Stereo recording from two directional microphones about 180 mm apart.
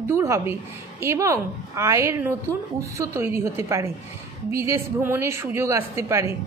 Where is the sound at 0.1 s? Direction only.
15° right (ahead or behind).